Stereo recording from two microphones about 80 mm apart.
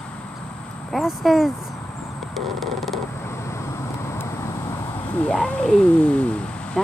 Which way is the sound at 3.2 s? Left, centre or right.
Left.